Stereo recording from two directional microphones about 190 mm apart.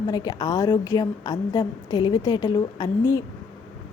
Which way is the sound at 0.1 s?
20° left (ahead or behind).